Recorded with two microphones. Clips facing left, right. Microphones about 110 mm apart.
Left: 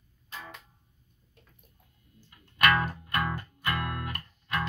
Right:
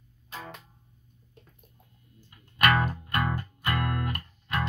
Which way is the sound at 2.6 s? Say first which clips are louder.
Right 1 dB; 20° right (ahead or behind).